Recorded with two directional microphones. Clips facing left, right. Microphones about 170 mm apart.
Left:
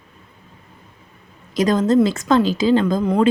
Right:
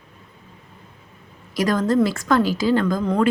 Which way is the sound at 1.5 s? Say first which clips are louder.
Left 3 dB; 20° left (ahead or behind).